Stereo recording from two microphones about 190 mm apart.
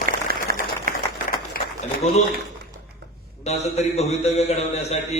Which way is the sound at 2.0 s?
35° left (ahead or behind).